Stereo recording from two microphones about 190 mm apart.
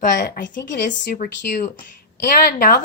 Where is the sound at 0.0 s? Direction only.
45° left (ahead or behind).